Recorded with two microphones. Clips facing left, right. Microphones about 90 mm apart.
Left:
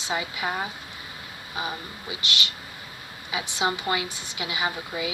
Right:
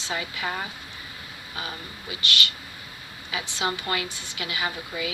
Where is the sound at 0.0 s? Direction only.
20° left (ahead or behind).